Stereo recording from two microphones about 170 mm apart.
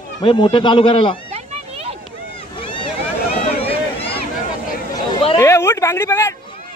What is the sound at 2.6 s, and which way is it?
Boat, 30° left (ahead or behind).